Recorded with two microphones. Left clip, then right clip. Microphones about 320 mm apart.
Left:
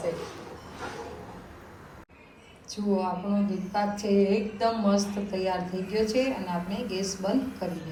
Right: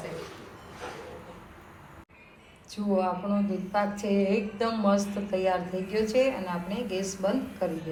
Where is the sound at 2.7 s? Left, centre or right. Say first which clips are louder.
Right 1 dB; centre.